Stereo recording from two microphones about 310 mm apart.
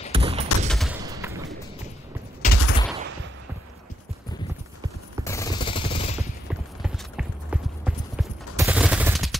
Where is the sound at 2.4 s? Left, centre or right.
Left.